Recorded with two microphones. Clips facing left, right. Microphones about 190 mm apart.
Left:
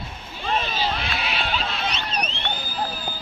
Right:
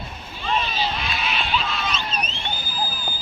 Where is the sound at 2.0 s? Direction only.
65° left (ahead or behind).